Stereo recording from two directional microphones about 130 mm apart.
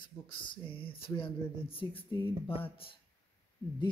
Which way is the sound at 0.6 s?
45° left (ahead or behind).